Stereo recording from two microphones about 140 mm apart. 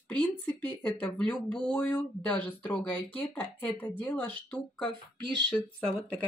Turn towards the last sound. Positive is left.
turn(degrees=5)  # may be behind; listen again after turning